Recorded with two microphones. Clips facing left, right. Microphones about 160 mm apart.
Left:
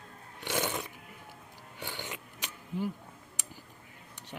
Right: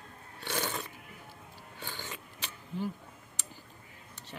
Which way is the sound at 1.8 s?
15° left (ahead or behind).